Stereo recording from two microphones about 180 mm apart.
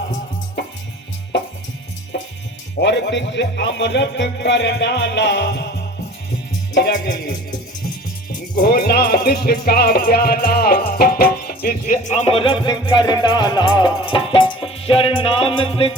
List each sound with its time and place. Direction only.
2.8 s speech: 80° left
6.7 s speech: 70° left (ahead or behind)
8.5 s music: 60° left (ahead or behind); by 16.0 s 30° left (ahead or behind)